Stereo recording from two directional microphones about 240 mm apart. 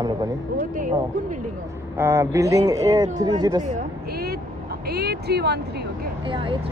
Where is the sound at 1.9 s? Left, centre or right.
Centre.